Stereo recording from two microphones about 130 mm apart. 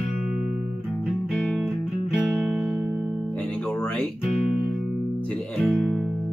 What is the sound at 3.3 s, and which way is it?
Music, 10° left (ahead or behind).